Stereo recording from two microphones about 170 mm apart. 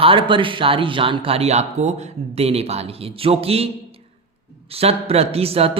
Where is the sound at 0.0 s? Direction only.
30° right (ahead or behind).